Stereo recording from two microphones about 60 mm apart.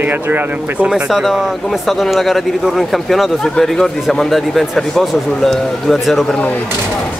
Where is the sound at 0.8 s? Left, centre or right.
Centre.